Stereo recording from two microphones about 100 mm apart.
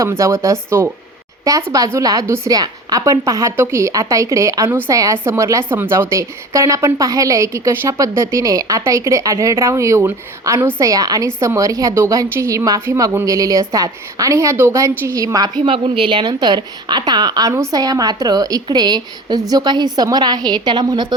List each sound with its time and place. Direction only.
0.0 s a woman's voice: 30° right (ahead or behind)
10.8 s a woman's voice: 35° right (ahead or behind)
15.6 s a woman's voice: 60° right (ahead or behind)